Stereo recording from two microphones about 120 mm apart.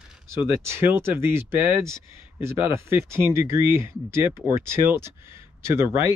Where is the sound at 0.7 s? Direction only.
20° right (ahead or behind).